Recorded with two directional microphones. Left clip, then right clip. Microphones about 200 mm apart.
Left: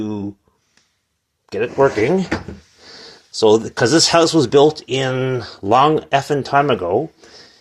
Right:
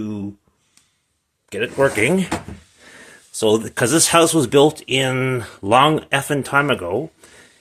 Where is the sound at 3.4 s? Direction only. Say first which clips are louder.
Left 4 dB; centre (ahead or behind).